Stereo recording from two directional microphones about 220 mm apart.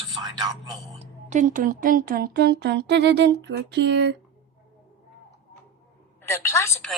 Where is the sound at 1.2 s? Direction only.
35° right (ahead or behind); by 4.1 s 50° right (ahead or behind).